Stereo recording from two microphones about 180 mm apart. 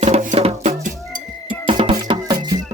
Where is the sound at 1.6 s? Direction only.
30° right (ahead or behind).